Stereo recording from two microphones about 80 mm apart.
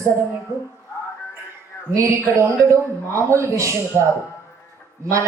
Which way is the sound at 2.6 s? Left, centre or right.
Right.